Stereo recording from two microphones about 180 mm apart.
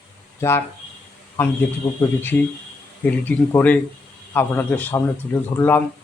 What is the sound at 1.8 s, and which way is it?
Speech, 15° left (ahead or behind).